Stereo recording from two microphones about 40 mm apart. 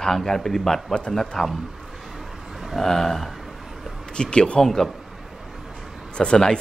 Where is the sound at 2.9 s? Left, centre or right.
Centre.